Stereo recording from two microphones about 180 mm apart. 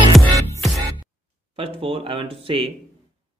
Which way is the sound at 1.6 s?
30° right (ahead or behind).